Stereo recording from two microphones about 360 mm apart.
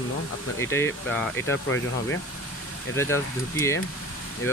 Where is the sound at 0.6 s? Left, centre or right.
Centre.